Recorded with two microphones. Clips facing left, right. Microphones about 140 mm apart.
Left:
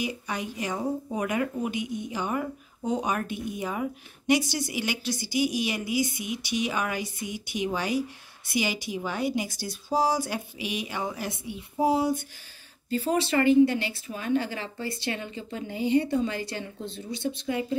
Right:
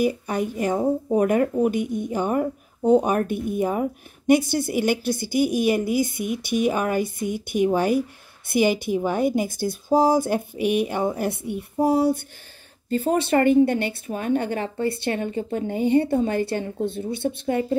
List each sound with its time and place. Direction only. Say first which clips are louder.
0.0 s a woman's voice: right 9 dB; 50° right (ahead or behind)